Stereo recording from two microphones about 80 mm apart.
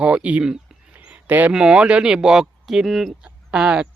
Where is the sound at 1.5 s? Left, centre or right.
Centre.